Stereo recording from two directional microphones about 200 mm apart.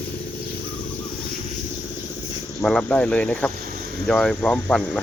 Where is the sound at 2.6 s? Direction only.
Centre (ahead or behind).